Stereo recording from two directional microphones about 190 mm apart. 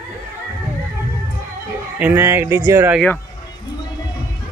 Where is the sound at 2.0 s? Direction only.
10° right (ahead or behind).